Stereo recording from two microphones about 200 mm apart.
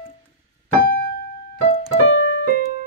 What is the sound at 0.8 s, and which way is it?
Keyboard, 50° left (ahead or behind).